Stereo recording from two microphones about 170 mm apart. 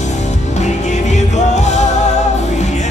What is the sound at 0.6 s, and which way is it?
Music, 45° left (ahead or behind).